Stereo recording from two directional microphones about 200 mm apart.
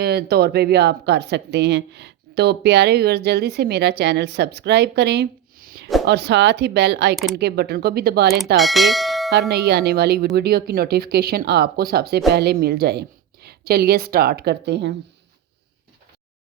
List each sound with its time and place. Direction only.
0.0 s a woman's voice: 55° right (ahead or behind)
8.5 s speech: centre (ahead or behind)
9.5 s a woman's voice: 55° right (ahead or behind)